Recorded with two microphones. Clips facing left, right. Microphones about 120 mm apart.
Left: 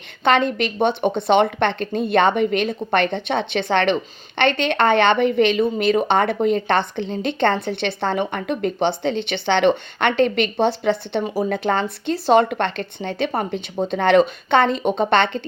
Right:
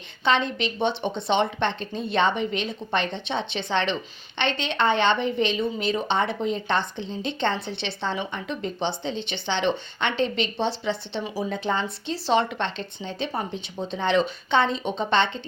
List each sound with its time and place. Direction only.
0.3 s speech: 55° left (ahead or behind)